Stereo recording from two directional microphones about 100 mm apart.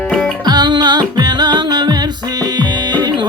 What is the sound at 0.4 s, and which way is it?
Music, 45° right (ahead or behind).